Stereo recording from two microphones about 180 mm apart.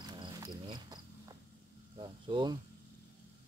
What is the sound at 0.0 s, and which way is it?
Cricket, 25° right (ahead or behind).